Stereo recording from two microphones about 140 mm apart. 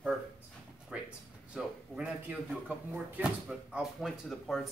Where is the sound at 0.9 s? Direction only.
10° right (ahead or behind).